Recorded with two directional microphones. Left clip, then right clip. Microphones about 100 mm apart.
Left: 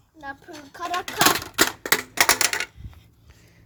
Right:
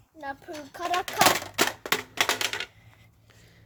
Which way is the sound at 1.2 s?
25° left (ahead or behind).